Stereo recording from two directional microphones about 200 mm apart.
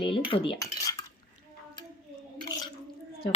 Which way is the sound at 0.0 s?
25° left (ahead or behind).